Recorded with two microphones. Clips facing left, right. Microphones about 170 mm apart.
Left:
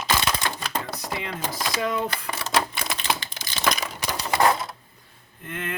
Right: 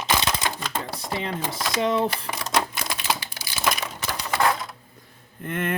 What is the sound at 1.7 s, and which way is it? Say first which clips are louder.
Speech: right 5 dB; 25° right (ahead or behind).